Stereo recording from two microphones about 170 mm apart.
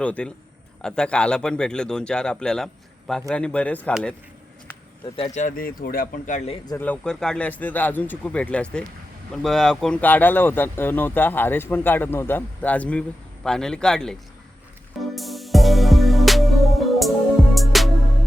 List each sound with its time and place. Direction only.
0.0 s speech: 5° left (ahead or behind)
5.1 s speech: 35° left (ahead or behind)
5.4 s speech: 50° left (ahead or behind)
6.7 s speech: 10° left (ahead or behind)
15.1 s music: centre (ahead or behind)